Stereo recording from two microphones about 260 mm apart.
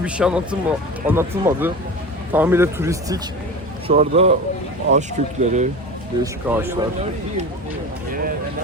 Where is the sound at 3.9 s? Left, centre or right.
Right.